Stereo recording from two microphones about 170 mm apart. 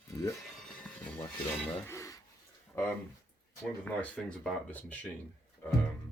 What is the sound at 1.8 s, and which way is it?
Speech, 20° left (ahead or behind).